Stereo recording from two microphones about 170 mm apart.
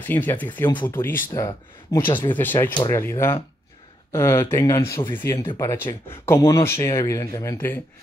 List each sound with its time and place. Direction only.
0.0 s speech: 10° left (ahead or behind)
5.4 s speech: 25° left (ahead or behind)
5.7 s speech: 15° left (ahead or behind)